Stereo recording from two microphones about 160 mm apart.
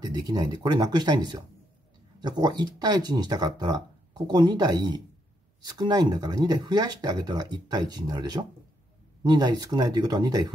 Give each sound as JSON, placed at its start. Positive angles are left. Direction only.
{"t": 0.0, "sound": "speech", "side_deg": -25}